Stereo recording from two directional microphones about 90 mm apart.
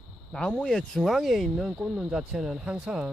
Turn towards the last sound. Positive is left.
turn(degrees=-10)  # may be behind; listen again after turning